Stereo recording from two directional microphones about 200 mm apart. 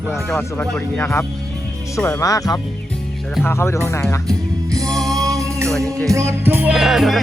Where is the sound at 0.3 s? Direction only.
5° left (ahead or behind).